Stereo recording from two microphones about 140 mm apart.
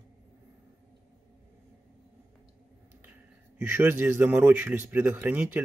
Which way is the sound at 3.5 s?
15° right (ahead or behind).